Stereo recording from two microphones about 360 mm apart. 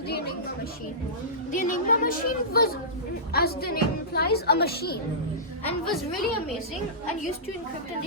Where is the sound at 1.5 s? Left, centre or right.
Left.